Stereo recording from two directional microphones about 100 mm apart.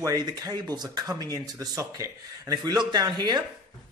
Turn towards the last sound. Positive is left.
turn(degrees=-45)  # may be behind; listen again after turning